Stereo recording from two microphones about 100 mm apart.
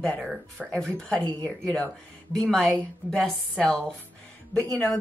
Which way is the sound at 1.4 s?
5° left (ahead or behind).